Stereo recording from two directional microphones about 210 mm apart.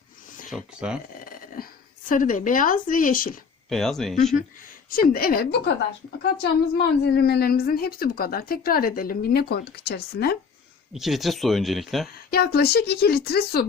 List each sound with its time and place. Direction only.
0.5 s speech: 5° right (ahead or behind)
1.2 s dog: 45° left (ahead or behind)
2.0 s speech: 40° left (ahead or behind)
3.7 s speech: centre (ahead or behind)
4.9 s a woman's voice: 45° left (ahead or behind)
6.7 s a woman's voice: 50° left (ahead or behind)
10.9 s speech: centre (ahead or behind)
12.3 s a woman's voice: 50° left (ahead or behind)